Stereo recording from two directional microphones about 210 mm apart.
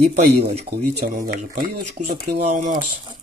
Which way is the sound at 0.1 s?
50° right (ahead or behind).